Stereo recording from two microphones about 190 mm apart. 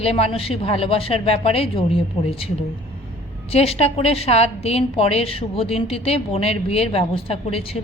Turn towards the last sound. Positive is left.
turn(degrees=30)  # may be behind; listen again after turning